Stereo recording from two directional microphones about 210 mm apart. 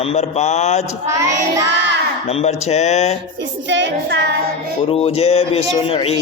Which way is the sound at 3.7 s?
55° right (ahead or behind).